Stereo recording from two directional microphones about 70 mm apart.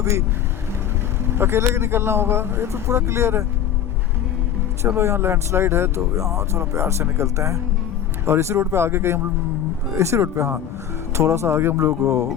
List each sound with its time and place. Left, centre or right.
0.0 s speech: right
1.4 s speech: right
4.9 s speech: right